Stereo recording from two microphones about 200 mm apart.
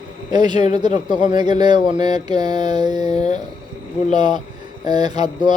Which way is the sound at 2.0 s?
20° right (ahead or behind).